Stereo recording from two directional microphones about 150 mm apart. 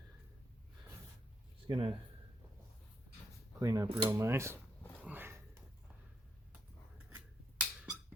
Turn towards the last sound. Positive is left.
turn(degrees=-10)  # may be behind; listen again after turning